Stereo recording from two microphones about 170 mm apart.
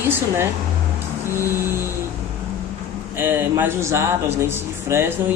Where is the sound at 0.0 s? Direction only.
15° right (ahead or behind).